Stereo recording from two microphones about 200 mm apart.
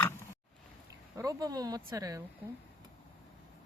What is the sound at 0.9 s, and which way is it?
Speech, 15° right (ahead or behind).